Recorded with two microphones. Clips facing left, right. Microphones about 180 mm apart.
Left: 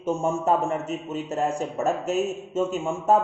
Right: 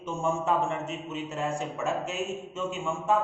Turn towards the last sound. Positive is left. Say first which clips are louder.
# left 5 dB
turn(degrees=40)  # may be behind; listen again after turning